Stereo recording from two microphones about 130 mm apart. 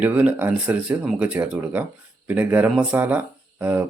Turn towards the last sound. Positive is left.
turn(degrees=-15)  # may be behind; listen again after turning